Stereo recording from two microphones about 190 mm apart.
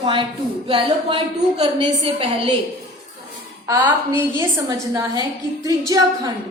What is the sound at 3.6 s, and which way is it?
A woman's voice, 10° right (ahead or behind).